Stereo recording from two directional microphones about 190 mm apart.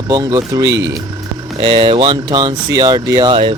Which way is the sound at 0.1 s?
20° right (ahead or behind).